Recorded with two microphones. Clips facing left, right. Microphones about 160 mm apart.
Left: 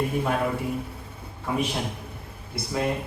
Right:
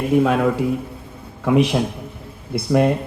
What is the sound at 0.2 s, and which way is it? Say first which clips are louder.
Speech: right 9 dB; 90° right.